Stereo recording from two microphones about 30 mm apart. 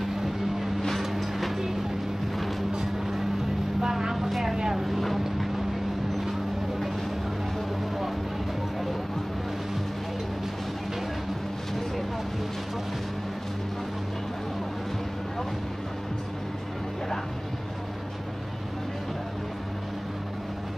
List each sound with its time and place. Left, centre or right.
1.0 s vehicle: centre
3.8 s vehicle: centre
4.8 s vehicle: centre